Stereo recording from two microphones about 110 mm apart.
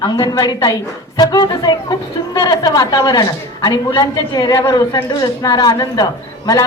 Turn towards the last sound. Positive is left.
turn(degrees=35)  # may be behind; listen again after turning